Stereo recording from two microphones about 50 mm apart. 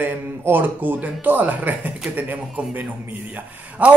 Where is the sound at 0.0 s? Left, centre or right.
Right.